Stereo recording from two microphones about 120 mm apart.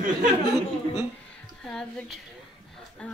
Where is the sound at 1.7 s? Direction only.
5° left (ahead or behind).